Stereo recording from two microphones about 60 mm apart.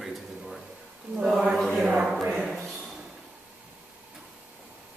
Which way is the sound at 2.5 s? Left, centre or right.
Centre.